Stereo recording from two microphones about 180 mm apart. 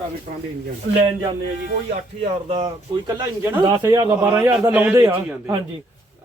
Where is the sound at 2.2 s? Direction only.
30° right (ahead or behind); by 5.5 s 10° right (ahead or behind).